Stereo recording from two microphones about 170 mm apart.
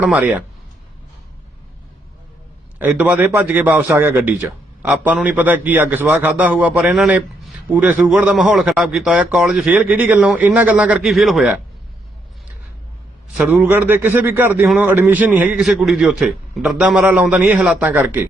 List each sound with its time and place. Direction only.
0.0 s a man's voice: 10° right (ahead or behind)
2.7 s a man's voice: 10° right (ahead or behind)
13.3 s a man's voice: 5° right (ahead or behind)